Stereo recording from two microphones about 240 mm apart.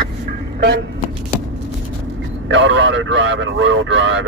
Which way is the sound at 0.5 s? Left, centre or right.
Right.